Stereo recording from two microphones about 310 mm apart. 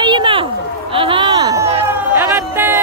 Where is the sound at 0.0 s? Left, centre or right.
Centre.